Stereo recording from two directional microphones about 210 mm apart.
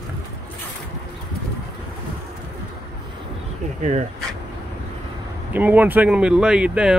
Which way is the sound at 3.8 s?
35° right (ahead or behind).